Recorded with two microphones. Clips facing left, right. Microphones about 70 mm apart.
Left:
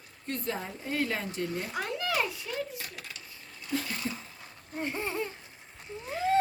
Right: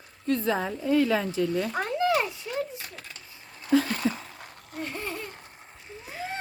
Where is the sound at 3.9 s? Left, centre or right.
Right.